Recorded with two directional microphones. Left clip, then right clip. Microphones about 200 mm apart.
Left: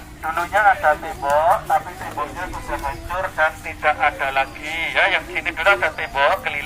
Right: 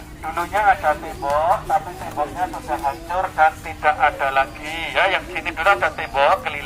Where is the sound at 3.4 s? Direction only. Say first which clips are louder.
Right 4 dB; 40° right (ahead or behind).